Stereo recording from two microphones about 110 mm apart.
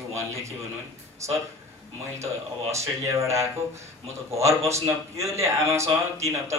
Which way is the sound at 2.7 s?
25° right (ahead or behind).